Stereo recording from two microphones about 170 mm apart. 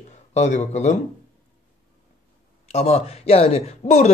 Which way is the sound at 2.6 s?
40° left (ahead or behind).